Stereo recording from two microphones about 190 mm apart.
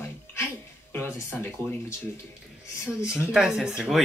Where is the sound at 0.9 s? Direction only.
15° left (ahead or behind).